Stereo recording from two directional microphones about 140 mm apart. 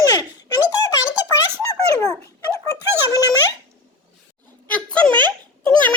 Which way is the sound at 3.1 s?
25° left (ahead or behind).